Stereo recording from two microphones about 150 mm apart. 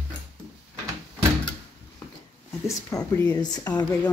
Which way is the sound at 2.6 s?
20° left (ahead or behind).